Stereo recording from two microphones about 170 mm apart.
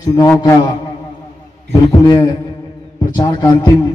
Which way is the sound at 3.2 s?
25° left (ahead or behind).